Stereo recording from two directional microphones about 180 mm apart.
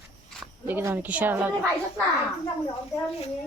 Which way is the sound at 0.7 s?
15° right (ahead or behind).